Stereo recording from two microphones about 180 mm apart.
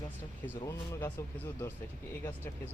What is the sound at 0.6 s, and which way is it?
Speech, 15° left (ahead or behind).